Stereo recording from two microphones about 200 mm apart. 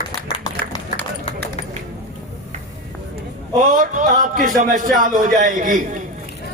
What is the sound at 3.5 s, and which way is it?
A man's voice, 40° right (ahead or behind).